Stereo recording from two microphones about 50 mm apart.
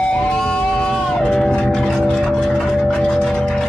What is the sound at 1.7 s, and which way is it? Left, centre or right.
Music, centre.